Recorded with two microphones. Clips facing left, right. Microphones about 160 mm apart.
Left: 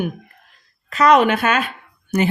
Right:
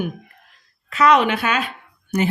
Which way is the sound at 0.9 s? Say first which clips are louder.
Left 2 dB; 40° left (ahead or behind).